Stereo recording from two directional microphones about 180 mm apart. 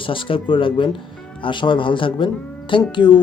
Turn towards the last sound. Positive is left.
turn(degrees=25)  # may be behind; listen again after turning